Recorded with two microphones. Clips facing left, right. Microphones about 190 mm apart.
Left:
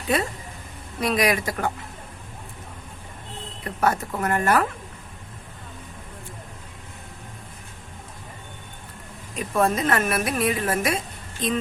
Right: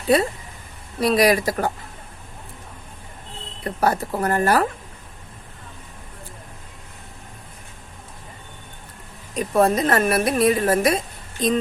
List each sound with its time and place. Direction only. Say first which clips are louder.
0.1 s a woman's voice: right 6 dB; 35° right (ahead or behind)
3.6 s a woman's voice: right 2 dB; 35° right (ahead or behind)
9.3 s a woman's voice: right 4 dB; 35° right (ahead or behind)